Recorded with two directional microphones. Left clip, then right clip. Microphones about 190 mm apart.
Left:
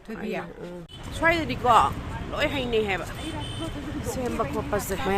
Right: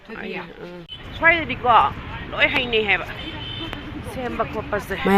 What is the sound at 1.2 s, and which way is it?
Speech, 10° left (ahead or behind).